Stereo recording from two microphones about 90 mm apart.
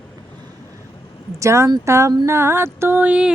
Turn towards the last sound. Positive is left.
turn(degrees=-15)  # may be behind; listen again after turning